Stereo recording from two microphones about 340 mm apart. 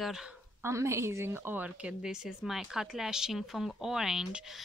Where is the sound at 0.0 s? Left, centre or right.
Centre.